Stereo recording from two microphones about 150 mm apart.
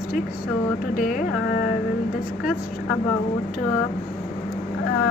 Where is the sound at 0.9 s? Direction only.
65° left (ahead or behind).